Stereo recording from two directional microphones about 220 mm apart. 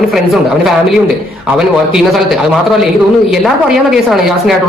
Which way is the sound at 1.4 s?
Centre (ahead or behind).